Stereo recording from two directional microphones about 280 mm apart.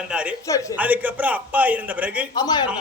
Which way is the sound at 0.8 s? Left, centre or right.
Centre.